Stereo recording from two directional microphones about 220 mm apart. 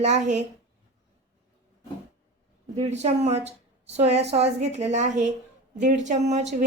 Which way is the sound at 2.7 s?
30° right (ahead or behind).